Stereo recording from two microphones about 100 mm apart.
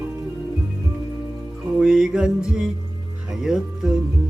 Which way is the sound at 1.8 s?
5° right (ahead or behind).